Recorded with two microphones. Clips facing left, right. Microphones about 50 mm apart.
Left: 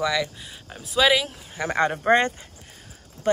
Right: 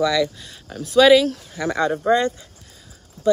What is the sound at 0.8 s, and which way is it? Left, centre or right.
Speech, centre.